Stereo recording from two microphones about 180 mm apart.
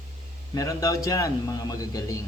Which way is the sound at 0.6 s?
20° left (ahead or behind).